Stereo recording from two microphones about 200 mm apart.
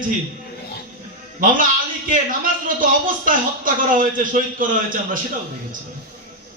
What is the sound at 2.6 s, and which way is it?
A man's voice, 45° right (ahead or behind).